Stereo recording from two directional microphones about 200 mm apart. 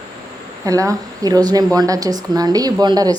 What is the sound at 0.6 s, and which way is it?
A woman's voice, 15° right (ahead or behind).